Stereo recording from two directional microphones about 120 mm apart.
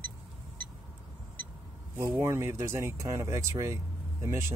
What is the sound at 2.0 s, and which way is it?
Speech, 25° right (ahead or behind).